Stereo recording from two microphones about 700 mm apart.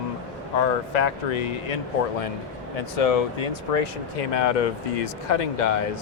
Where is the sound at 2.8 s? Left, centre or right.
Left.